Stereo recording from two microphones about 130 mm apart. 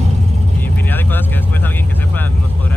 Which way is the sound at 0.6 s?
15° left (ahead or behind).